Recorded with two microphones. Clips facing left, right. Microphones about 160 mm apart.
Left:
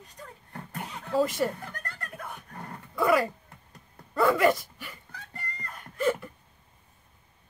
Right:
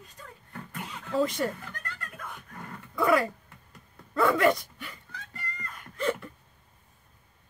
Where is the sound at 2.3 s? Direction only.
35° left (ahead or behind).